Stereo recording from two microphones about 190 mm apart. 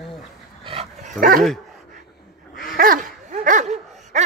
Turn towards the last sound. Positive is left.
turn(degrees=-40)  # may be behind; listen again after turning